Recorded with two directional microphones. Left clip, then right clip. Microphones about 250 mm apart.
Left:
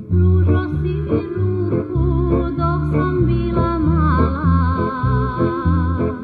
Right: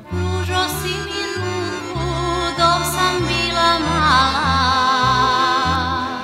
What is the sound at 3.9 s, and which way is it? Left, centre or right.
Music, right.